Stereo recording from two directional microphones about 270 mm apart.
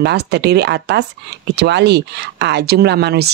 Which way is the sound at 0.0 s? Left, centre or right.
Right.